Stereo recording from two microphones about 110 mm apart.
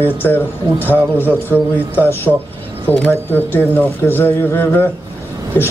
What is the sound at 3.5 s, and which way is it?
A man's voice, 20° left (ahead or behind).